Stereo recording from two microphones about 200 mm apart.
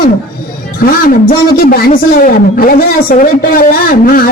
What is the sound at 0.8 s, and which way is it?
A man's voice, 45° left (ahead or behind).